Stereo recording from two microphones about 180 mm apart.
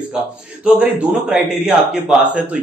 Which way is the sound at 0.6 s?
5° right (ahead or behind).